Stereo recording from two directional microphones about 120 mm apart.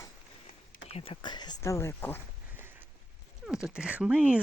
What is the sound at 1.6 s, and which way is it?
Speech, 25° left (ahead or behind).